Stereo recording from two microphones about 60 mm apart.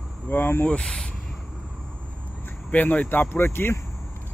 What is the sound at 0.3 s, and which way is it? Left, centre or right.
Speech, left.